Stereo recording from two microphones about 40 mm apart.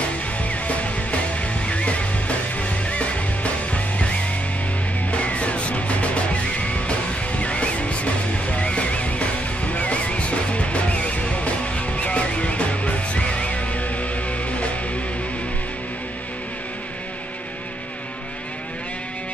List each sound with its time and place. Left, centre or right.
1.7 s music: left